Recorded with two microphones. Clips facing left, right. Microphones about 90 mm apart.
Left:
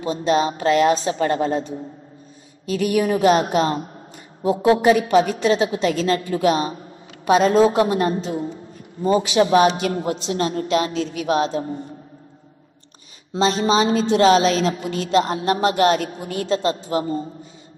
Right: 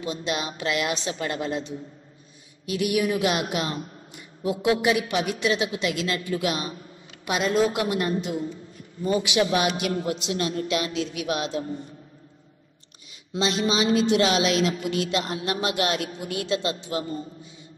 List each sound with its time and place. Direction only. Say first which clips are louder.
0.0 s a woman's voice: left 10 dB; 35° left (ahead or behind)
13.3 s a woman's voice: left 6 dB; 35° left (ahead or behind)